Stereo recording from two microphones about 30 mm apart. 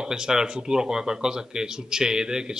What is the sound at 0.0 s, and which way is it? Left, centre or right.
Speech, right.